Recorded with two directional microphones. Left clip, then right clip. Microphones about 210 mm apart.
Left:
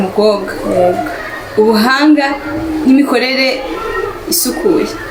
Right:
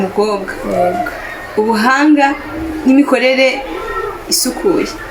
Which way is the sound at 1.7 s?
25° right (ahead or behind).